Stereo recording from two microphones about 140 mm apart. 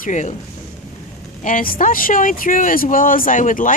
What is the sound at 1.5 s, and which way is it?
Speech, 80° left.